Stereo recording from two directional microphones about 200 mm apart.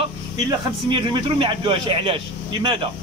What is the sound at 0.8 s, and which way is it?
A man's voice, 25° right (ahead or behind).